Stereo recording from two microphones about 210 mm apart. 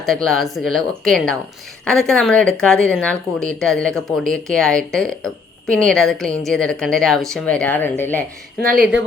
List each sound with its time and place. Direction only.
0.0 s speech: centre (ahead or behind)
8.6 s speech: 40° right (ahead or behind)